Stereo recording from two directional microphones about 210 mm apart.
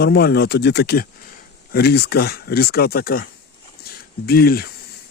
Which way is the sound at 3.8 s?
45° left (ahead or behind).